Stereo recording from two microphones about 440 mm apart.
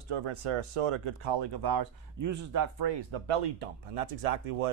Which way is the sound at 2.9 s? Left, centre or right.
Right.